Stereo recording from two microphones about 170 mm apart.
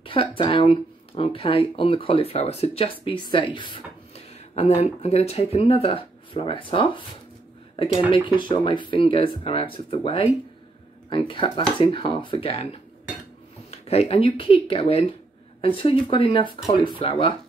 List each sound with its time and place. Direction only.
0.0 s a sound: 30° left (ahead or behind)
0.4 s speech: 30° left (ahead or behind)
7.7 s dishes: 30° left (ahead or behind)
8.3 s speech: 30° left (ahead or behind)
13.7 s speech: 35° left (ahead or behind)